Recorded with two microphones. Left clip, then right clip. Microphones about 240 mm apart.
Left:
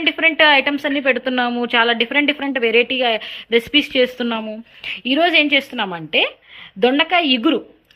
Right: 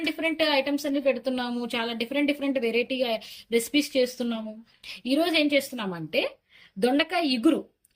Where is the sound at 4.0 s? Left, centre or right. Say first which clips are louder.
Left 8 dB; centre.